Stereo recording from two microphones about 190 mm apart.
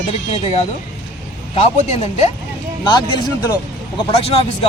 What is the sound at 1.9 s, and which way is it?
Speech, 35° left (ahead or behind).